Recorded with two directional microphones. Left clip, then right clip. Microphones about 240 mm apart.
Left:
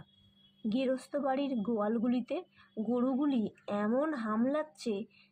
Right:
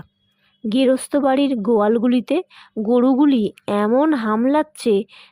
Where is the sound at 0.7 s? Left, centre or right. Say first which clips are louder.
Right 16 dB; right.